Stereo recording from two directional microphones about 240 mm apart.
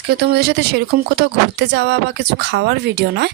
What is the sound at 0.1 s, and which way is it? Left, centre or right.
Speech, right.